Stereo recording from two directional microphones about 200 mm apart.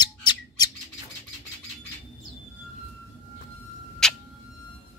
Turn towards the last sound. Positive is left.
turn(degrees=5)  # may be behind; listen again after turning